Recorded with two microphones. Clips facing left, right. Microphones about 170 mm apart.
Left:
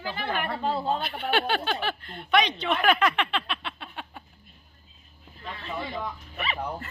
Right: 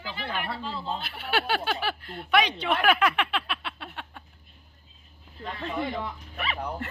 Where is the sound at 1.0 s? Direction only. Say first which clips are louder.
Left 2 dB; 5° right (ahead or behind).